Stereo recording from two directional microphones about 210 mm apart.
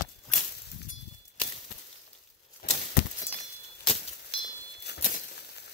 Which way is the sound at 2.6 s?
50° left (ahead or behind).